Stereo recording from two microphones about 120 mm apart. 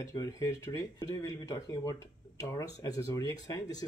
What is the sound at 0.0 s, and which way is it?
Speech, 25° left (ahead or behind).